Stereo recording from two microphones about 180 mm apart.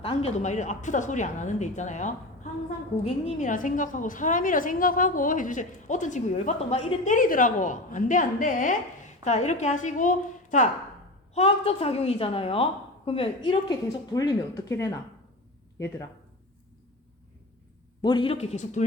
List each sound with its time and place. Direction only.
0.0 s a woman's voice: 30° left (ahead or behind); by 14.9 s 15° left (ahead or behind)
18.0 s a woman's voice: 25° left (ahead or behind)